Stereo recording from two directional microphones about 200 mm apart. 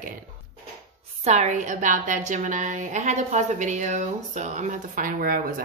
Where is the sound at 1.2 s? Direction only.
35° right (ahead or behind).